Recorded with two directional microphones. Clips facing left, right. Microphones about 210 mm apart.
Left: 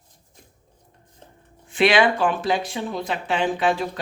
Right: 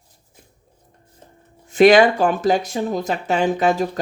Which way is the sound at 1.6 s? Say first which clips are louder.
Right 7 dB; 40° right (ahead or behind).